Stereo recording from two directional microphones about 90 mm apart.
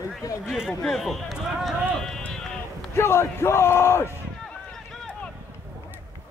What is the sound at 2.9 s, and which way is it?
Speech, 30° left (ahead or behind).